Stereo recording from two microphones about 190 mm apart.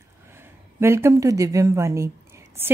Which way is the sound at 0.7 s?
15° right (ahead or behind).